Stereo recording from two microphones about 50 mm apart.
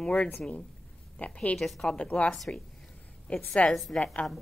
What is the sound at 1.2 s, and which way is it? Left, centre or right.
Speech, left.